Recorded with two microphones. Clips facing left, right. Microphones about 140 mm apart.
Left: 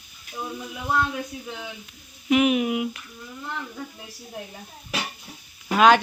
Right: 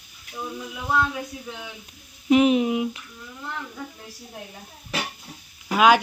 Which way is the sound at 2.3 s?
30° right (ahead or behind).